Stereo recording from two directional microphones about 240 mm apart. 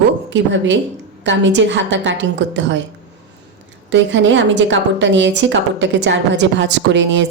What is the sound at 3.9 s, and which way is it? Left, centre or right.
A woman's voice, right.